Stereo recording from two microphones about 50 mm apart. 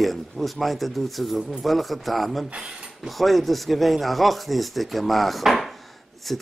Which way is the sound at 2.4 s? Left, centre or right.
Right.